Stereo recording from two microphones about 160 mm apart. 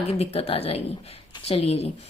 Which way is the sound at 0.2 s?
40° left (ahead or behind).